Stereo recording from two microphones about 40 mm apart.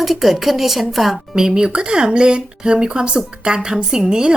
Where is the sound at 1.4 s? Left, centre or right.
Centre.